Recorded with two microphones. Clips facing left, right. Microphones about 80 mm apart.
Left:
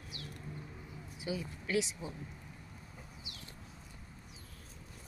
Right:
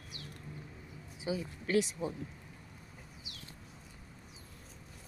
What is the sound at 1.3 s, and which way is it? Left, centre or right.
Speech, right.